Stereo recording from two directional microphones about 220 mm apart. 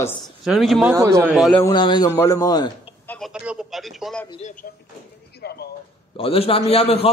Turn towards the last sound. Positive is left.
turn(degrees=25)  # may be behind; listen again after turning